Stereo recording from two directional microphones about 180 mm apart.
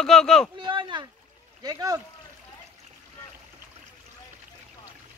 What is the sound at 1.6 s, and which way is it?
Speech, 20° right (ahead or behind).